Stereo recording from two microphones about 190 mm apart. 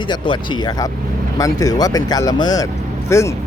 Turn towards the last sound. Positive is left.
turn(degrees=15)  # may be behind; listen again after turning